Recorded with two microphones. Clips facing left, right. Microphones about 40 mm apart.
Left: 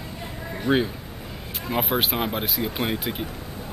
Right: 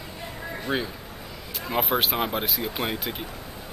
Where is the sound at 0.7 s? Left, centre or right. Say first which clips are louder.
Left 6 dB; left.